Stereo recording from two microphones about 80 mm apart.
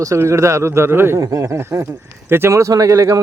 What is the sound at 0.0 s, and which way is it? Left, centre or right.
Speech, right.